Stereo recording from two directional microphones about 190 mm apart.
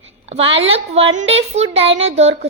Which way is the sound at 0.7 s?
30° right (ahead or behind).